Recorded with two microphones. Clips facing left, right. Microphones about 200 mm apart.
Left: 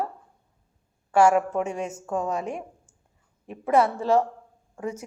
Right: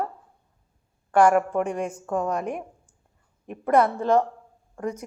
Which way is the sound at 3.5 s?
5° left (ahead or behind).